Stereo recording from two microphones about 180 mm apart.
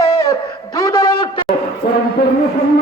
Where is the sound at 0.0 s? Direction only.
20° left (ahead or behind).